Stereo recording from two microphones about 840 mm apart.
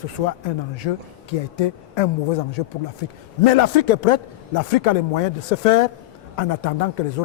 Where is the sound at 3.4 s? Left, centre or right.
Left.